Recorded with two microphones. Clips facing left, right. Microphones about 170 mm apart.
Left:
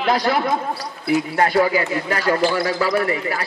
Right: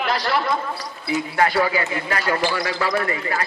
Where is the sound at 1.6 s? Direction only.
40° left (ahead or behind).